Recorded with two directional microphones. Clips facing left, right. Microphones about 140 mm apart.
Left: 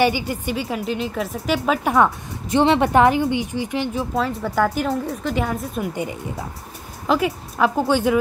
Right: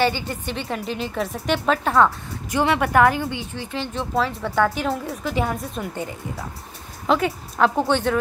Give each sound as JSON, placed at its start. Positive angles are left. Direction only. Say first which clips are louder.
{"t": 0.0, "sound": "a woman's voice", "louder": "left 3 dB", "side_deg": 10}
{"t": 2.5, "sound": "a woman's voice", "louder": "left 3 dB", "side_deg": 25}
{"t": 4.1, "sound": "a woman's voice", "louder": "left 1 dB", "side_deg": 0}
{"t": 7.1, "sound": "a woman's voice", "louder": "left 1 dB", "side_deg": 5}